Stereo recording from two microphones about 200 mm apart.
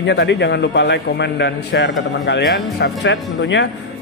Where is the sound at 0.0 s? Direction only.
60° left (ahead or behind).